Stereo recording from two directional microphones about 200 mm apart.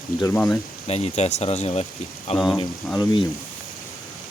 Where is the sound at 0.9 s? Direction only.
30° left (ahead or behind).